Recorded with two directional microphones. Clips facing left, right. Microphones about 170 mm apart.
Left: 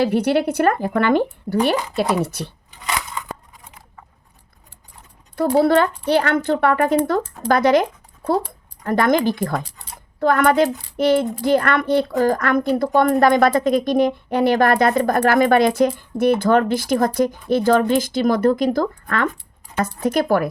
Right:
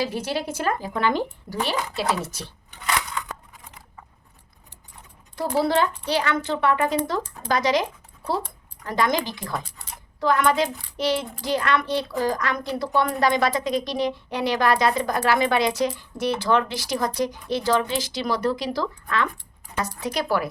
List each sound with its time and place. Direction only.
0.0 s speech: 60° left (ahead or behind)
5.5 s speech: 55° left (ahead or behind)